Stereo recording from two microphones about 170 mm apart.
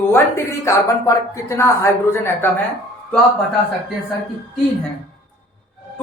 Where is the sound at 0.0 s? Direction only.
15° left (ahead or behind).